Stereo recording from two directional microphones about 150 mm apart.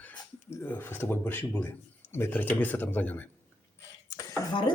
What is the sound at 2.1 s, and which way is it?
Speech, 15° left (ahead or behind).